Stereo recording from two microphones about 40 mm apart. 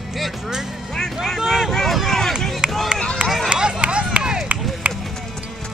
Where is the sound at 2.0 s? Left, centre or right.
Centre.